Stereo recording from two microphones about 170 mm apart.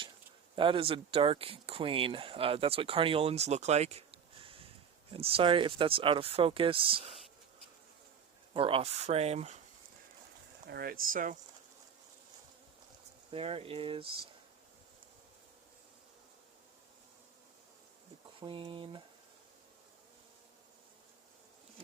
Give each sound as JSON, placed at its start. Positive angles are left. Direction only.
{"t": 0.5, "sound": "speech", "side_deg": -30}
{"t": 8.5, "sound": "speech", "side_deg": -35}
{"t": 10.7, "sound": "speech", "side_deg": -60}
{"t": 13.3, "sound": "speech", "side_deg": -35}
{"t": 18.3, "sound": "speech", "side_deg": -30}